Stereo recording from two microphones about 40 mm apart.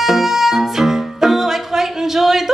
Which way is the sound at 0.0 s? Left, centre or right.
Centre.